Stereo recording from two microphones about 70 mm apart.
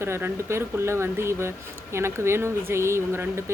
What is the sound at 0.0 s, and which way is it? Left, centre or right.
Speech, right.